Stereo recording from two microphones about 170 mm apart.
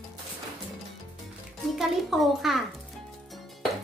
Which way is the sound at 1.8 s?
Centre (ahead or behind).